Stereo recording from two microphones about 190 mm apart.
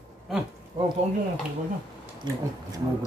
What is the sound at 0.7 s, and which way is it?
Cutlery, 25° right (ahead or behind).